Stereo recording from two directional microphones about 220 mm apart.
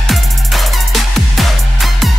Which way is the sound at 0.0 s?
Centre (ahead or behind).